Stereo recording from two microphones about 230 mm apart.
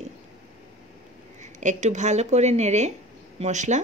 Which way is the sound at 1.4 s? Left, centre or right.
Right.